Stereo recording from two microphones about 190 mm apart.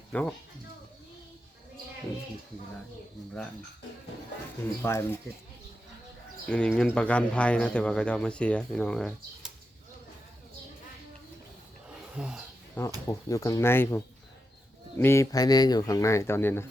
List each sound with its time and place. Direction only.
0.1 s speech: 5° left (ahead or behind)
4.8 s speech: 15° left (ahead or behind)
6.4 s speech: 5° left (ahead or behind)
11.9 s a sound: 5° right (ahead or behind)
13.1 s speech: 15° left (ahead or behind)